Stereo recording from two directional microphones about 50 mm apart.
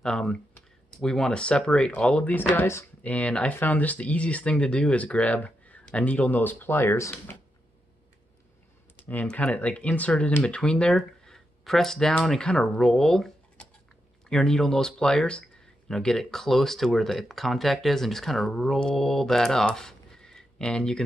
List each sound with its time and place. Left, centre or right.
0.0 s speech: centre
3.0 s speech: left
8.9 s computer keyboard: left
9.3 s speech: left
10.4 s speech: centre
11.0 s speech: centre
14.3 s speech: centre